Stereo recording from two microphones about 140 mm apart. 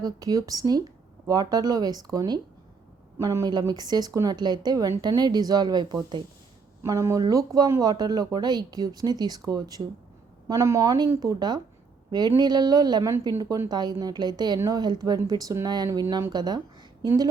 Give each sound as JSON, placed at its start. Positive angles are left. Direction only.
{"t": 0.0, "sound": "speech", "side_deg": -25}
{"t": 6.8, "sound": "a woman's voice", "side_deg": -20}